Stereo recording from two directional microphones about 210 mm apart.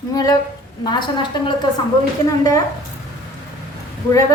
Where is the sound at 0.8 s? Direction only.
20° left (ahead or behind).